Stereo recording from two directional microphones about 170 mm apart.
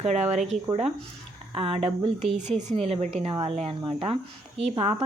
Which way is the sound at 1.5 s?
30° right (ahead or behind).